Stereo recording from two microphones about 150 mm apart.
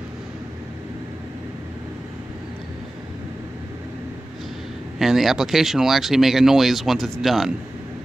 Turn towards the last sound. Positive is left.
turn(degrees=0)  # may be behind; listen again after turning